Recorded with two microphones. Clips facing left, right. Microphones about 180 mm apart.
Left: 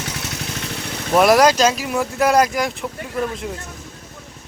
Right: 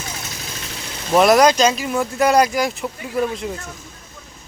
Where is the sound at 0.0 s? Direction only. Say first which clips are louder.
Left 4 dB; 65° left (ahead or behind).